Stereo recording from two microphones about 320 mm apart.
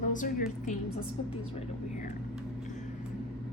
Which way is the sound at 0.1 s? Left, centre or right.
Left.